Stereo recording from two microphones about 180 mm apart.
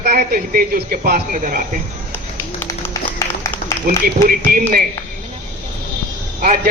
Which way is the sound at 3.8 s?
50° right (ahead or behind).